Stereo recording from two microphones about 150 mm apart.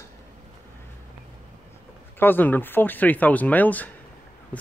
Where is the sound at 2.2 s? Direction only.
15° left (ahead or behind).